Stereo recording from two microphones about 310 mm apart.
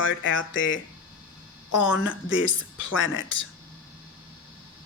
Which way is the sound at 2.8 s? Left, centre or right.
Left.